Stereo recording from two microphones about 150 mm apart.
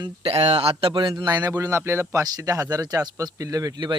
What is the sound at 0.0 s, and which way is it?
Speech, 40° right (ahead or behind).